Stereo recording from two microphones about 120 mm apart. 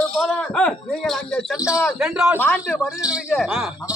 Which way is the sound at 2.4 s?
15° left (ahead or behind).